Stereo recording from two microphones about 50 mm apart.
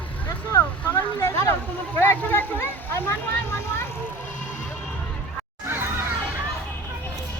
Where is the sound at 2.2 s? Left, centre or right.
Left.